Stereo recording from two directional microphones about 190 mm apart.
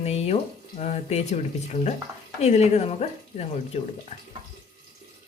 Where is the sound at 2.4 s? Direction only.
35° left (ahead or behind).